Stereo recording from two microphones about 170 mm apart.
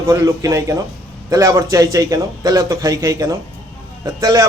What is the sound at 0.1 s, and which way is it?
A man's voice, 20° right (ahead or behind).